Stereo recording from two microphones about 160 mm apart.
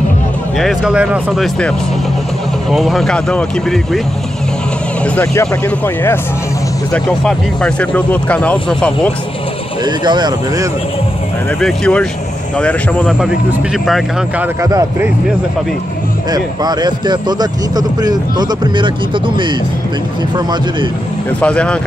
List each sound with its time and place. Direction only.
0.6 s speech: centre (ahead or behind)
2.7 s speech: centre (ahead or behind)
5.0 s speech: 15° left (ahead or behind)
6.9 s speech: 5° left (ahead or behind)
9.8 s speech: 25° right (ahead or behind)
11.6 s speech: 5° left (ahead or behind)
13.0 s speech: 5° right (ahead or behind)
14.6 s speech: 20° right (ahead or behind)
16.3 s speech: 25° right (ahead or behind)
21.4 s speech: 5° left (ahead or behind)